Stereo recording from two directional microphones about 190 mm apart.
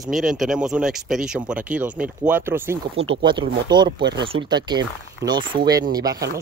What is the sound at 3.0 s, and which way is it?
Speech, 25° right (ahead or behind).